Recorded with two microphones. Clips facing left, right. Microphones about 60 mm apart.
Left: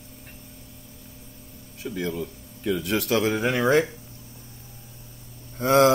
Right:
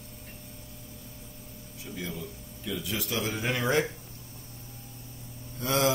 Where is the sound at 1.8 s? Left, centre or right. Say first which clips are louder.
Left 9 dB; left.